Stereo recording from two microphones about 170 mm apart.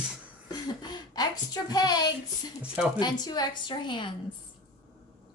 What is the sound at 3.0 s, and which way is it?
A woman's voice, 25° left (ahead or behind).